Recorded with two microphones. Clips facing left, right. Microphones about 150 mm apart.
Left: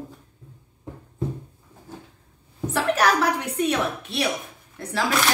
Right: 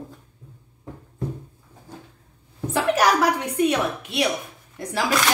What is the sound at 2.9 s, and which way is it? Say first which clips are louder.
A woman's voice: right 2 dB; 10° right (ahead or behind).